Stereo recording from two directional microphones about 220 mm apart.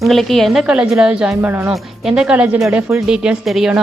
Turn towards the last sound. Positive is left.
turn(degrees=0)  # may be behind; listen again after turning